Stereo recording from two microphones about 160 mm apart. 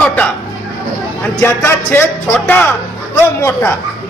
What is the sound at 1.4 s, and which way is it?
A man's voice, 15° left (ahead or behind).